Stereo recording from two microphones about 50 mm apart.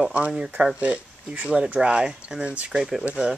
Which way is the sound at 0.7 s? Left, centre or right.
Right.